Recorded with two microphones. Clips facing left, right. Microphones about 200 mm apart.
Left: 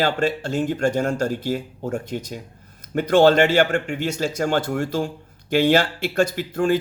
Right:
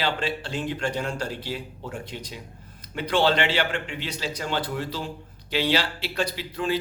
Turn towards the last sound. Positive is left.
turn(degrees=50)  # may be behind; listen again after turning